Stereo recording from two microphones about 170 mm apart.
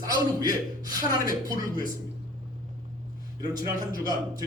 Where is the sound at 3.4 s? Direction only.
20° right (ahead or behind).